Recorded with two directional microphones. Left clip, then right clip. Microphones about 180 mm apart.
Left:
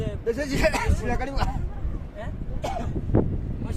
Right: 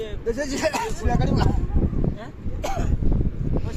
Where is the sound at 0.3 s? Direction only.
40° right (ahead or behind).